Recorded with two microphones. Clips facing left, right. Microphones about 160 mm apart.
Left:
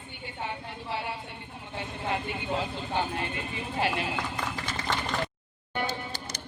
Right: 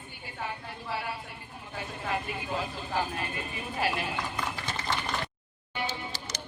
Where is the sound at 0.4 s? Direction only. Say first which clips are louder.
Left 1 dB; 25° left (ahead or behind).